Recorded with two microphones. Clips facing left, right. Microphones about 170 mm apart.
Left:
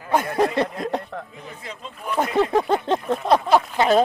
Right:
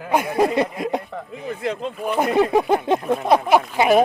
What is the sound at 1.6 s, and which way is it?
Speech, 70° right (ahead or behind).